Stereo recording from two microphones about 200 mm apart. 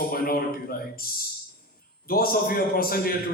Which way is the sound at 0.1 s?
50° left (ahead or behind).